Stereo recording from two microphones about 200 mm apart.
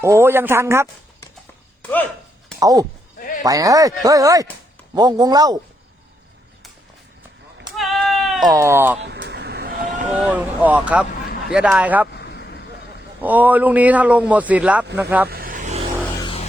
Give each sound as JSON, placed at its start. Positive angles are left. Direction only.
{"t": 0.0, "sound": "speech", "side_deg": -10}
{"t": 2.6, "sound": "speech", "side_deg": -15}
{"t": 3.2, "sound": "sheep", "side_deg": 45}
{"t": 3.4, "sound": "speech", "side_deg": -15}
{"t": 7.8, "sound": "sheep", "side_deg": 0}
{"t": 8.4, "sound": "speech", "side_deg": -15}
{"t": 9.0, "sound": "vehicle", "side_deg": -60}
{"t": 10.2, "sound": "speech", "side_deg": -5}
{"t": 12.1, "sound": "vehicle", "side_deg": 55}
{"t": 13.2, "sound": "speech", "side_deg": -10}
{"t": 15.3, "sound": "vehicle", "side_deg": -45}
{"t": 16.2, "sound": "music", "side_deg": 25}